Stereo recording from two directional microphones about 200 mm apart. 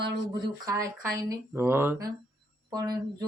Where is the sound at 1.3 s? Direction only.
15° right (ahead or behind).